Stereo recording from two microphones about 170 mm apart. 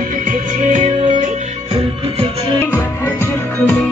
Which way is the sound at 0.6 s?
45° right (ahead or behind).